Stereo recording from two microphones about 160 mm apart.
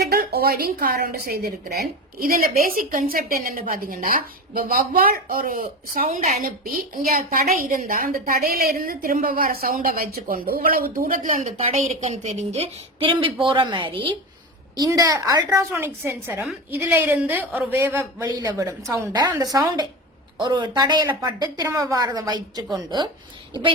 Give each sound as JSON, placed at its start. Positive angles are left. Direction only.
{"t": 0.1, "sound": "a woman's voice", "side_deg": -75}
{"t": 6.4, "sound": "a woman's voice", "side_deg": -60}
{"t": 11.5, "sound": "a woman's voice", "side_deg": -40}